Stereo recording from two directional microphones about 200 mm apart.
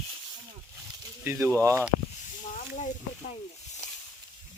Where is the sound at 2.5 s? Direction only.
40° left (ahead or behind).